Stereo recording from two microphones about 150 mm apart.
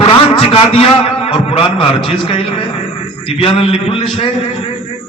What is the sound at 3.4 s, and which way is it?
Speech, 40° left (ahead or behind).